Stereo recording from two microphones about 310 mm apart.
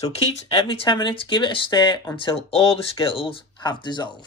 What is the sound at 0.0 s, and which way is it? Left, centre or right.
Speech, centre.